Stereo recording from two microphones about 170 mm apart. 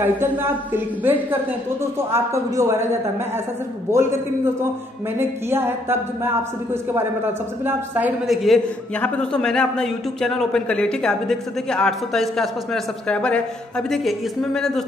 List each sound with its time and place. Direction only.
0.0 s a man's voice: 10° right (ahead or behind)
3.9 s a man's voice: 15° right (ahead or behind)
5.5 s a man's voice: 15° right (ahead or behind); by 14.7 s centre (ahead or behind)